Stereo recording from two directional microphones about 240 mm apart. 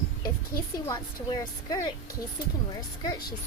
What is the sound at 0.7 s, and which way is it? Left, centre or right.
Speech, centre.